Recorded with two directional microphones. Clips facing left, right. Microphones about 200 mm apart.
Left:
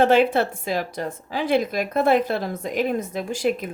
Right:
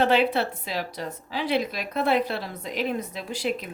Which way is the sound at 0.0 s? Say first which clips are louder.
Left 4 dB; 45° left (ahead or behind).